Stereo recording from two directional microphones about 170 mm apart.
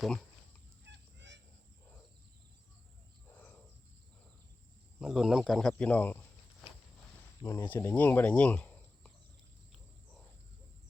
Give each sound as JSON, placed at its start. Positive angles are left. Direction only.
{"t": 0.0, "sound": "fowl", "side_deg": 5}
{"t": 0.9, "sound": "goose", "side_deg": -90}
{"t": 3.2, "sound": "a sound", "side_deg": 10}
{"t": 4.9, "sound": "speech", "side_deg": 0}
{"t": 7.4, "sound": "speech", "side_deg": 15}